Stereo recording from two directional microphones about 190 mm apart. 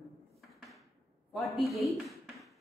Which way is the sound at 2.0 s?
Centre (ahead or behind).